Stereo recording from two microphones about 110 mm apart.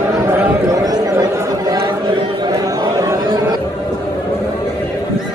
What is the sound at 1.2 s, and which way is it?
Chatter, 35° right (ahead or behind).